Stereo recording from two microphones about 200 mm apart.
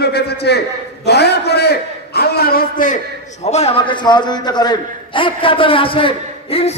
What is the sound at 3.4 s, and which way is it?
A man's voice, 35° left (ahead or behind).